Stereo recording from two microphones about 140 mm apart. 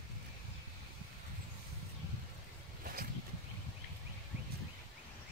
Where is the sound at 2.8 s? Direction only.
90° right.